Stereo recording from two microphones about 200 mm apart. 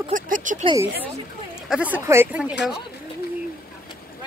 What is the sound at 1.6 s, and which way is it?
Speech, 5° right (ahead or behind).